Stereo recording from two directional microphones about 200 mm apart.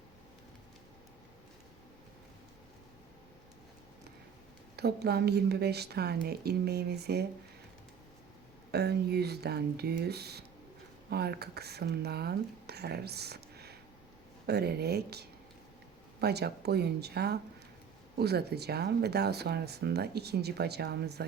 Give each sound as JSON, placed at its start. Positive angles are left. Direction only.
{"t": 4.8, "sound": "speech", "side_deg": -55}
{"t": 8.7, "sound": "speech", "side_deg": -55}